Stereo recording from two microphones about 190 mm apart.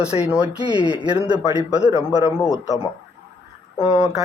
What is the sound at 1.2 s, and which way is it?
Speech, 25° right (ahead or behind).